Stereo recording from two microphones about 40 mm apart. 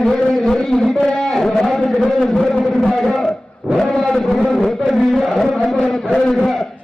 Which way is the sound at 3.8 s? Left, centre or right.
Centre.